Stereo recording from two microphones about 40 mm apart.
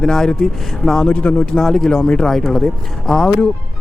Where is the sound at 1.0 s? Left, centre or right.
Left.